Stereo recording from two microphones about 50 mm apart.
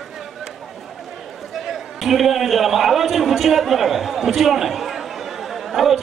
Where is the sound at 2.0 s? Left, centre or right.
Centre.